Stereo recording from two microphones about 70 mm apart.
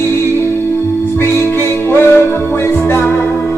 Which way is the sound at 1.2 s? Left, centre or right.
Left.